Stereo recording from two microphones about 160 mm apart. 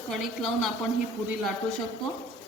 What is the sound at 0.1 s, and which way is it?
Speech, centre (ahead or behind).